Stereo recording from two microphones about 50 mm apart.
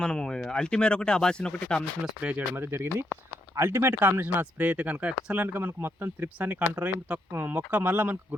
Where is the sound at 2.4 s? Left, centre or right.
Right.